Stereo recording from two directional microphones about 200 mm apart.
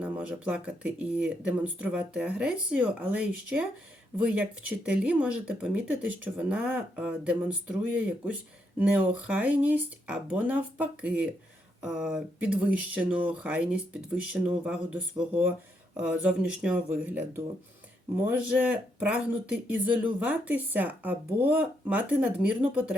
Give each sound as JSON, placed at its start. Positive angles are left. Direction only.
{"t": 0.0, "sound": "speech", "side_deg": -5}